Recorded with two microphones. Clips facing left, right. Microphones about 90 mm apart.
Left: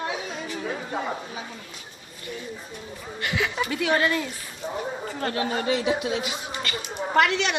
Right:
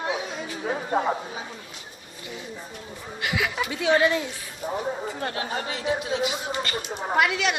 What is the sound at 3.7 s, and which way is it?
Speech, 20° right (ahead or behind).